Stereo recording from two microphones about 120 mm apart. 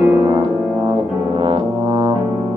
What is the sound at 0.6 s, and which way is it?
Brass instrument, 35° right (ahead or behind).